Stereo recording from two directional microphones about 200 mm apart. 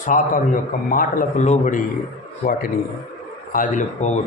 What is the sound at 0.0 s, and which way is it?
A man's voice, 40° left (ahead or behind).